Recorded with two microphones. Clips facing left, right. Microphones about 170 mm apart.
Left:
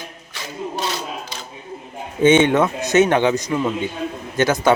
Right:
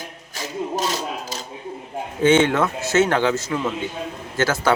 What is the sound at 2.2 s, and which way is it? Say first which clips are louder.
Speech: left 3 dB; 20° left (ahead or behind).